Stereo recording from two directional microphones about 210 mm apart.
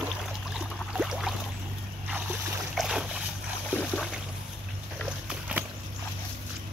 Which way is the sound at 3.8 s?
Centre (ahead or behind).